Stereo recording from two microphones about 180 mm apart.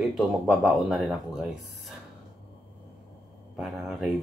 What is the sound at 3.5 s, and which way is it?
Speech, 5° right (ahead or behind).